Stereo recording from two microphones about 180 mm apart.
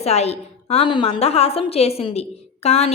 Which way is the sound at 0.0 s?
35° left (ahead or behind).